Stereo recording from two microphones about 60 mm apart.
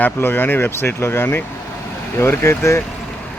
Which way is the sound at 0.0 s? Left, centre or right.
Left.